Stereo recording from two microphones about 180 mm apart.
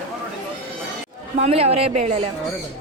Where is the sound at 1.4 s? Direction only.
35° right (ahead or behind).